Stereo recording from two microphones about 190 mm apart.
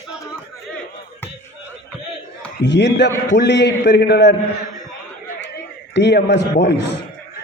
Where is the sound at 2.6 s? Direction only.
65° left (ahead or behind).